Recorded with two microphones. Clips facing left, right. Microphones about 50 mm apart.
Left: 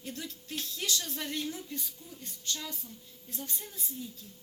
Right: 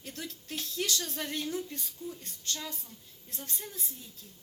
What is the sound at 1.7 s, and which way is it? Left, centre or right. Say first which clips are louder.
A woman's voice: right 2 dB; right.